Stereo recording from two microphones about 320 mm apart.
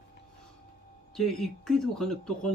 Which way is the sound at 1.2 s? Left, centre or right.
Centre.